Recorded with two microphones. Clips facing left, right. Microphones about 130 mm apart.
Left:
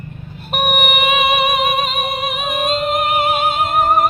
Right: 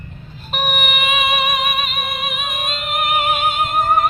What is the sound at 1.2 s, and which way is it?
Music, 25° left (ahead or behind).